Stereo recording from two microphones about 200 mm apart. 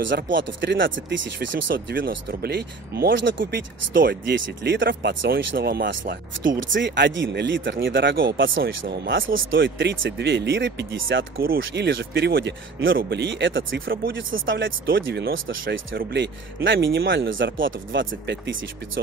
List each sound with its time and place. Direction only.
0.4 s speech: 65° right (ahead or behind)
2.0 s speech: 50° right (ahead or behind); by 3.6 s 65° right (ahead or behind)
3.9 s speech: 50° right (ahead or behind)
6.7 s speech: 65° right (ahead or behind)
8.8 s speech: 50° right (ahead or behind)
9.3 s speech: 75° right (ahead or behind)
9.6 s speech: 65° right (ahead or behind)
11.3 s speech: 50° right (ahead or behind)
11.6 s speech: 65° right (ahead or behind)
12.8 s speech: 70° right (ahead or behind)
14.9 s speech: 50° right (ahead or behind)
15.3 s speech: 75° right (ahead or behind)
16.0 s speech: 55° right (ahead or behind)